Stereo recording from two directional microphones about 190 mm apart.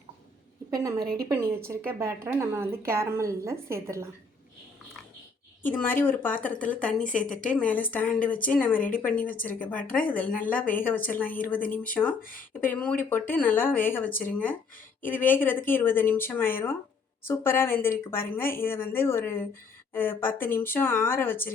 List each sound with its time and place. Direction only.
0.7 s a woman's voice: 20° right (ahead or behind)
1.0 s a woman's voice: 55° right (ahead or behind)
1.3 s a woman's voice: 15° right (ahead or behind)
5.6 s speech: 10° left (ahead or behind)
7.0 s speech: 45° left (ahead or behind)
7.3 s speech: 5° left (ahead or behind)
12.2 s speech: 45° left (ahead or behind)
12.5 s speech: 10° left (ahead or behind)